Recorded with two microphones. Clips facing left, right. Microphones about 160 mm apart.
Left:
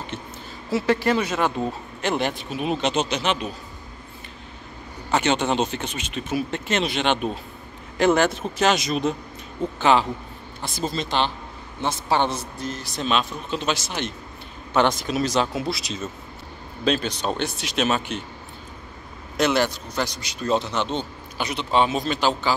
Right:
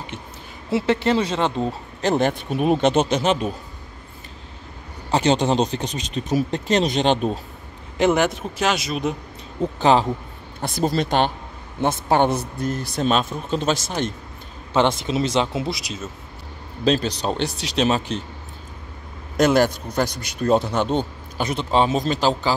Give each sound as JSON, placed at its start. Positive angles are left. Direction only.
{"t": 0.7, "sound": "speech", "side_deg": -25}
{"t": 2.0, "sound": "a man's voice", "side_deg": -40}
{"t": 5.1, "sound": "speech", "side_deg": -35}
{"t": 8.0, "sound": "speech", "side_deg": -15}
{"t": 9.8, "sound": "speech", "side_deg": -35}
{"t": 10.6, "sound": "a man's voice", "side_deg": -65}
{"t": 14.7, "sound": "speech", "side_deg": -25}
{"t": 15.8, "sound": "speech", "side_deg": -5}
{"t": 16.8, "sound": "speech", "side_deg": -35}
{"t": 19.3, "sound": "a man's voice", "side_deg": -45}